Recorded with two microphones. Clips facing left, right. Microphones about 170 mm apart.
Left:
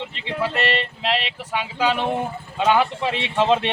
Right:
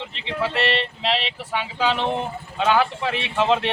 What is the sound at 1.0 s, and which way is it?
Speech, 10° left (ahead or behind).